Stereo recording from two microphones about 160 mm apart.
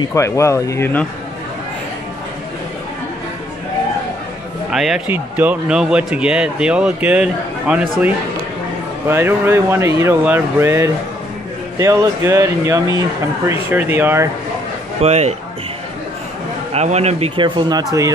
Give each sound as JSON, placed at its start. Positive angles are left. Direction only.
{"t": 0.0, "sound": "speech", "side_deg": 20}
{"t": 4.6, "sound": "a man's voice", "side_deg": -5}
{"t": 9.1, "sound": "a man's voice", "side_deg": -15}
{"t": 15.0, "sound": "a man's voice", "side_deg": -40}
{"t": 16.7, "sound": "speech", "side_deg": -45}